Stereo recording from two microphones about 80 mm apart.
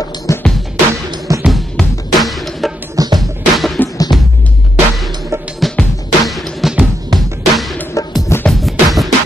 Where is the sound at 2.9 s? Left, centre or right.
Right.